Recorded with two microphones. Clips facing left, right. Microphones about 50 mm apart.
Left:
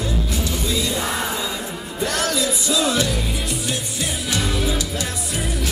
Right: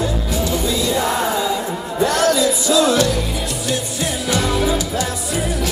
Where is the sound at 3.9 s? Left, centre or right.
Right.